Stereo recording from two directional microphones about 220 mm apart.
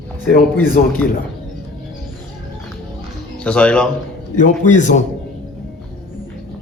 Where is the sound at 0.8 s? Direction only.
40° left (ahead or behind).